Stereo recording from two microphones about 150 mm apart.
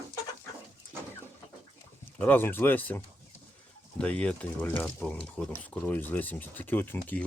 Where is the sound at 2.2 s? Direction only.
10° left (ahead or behind).